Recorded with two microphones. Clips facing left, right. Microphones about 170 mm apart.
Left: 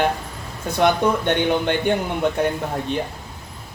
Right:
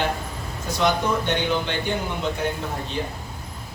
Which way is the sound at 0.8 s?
55° left (ahead or behind).